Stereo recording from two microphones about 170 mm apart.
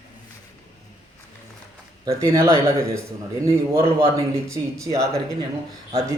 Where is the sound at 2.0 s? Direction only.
15° right (ahead or behind).